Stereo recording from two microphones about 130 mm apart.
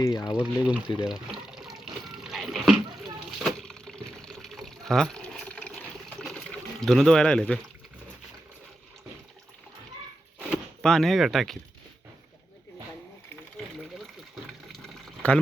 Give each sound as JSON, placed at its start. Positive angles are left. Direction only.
{"t": 0.0, "sound": "speech", "side_deg": 30}
{"t": 0.3, "sound": "speech", "side_deg": -10}
{"t": 0.9, "sound": "water", "side_deg": -5}
{"t": 6.2, "sound": "a sound", "side_deg": 5}
{"t": 10.8, "sound": "speech", "side_deg": 5}
{"t": 14.7, "sound": "liquid", "side_deg": 5}